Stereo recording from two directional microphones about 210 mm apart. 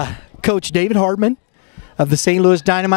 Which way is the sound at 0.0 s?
15° left (ahead or behind).